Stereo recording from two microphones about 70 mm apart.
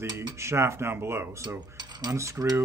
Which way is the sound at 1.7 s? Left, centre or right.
Right.